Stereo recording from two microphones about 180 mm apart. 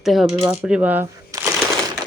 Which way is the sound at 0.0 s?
Centre (ahead or behind).